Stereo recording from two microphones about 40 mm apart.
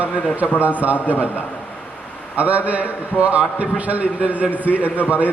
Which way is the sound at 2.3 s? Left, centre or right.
Right.